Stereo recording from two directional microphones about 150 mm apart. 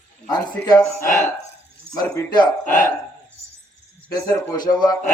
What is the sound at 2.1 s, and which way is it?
Speech, 25° left (ahead or behind).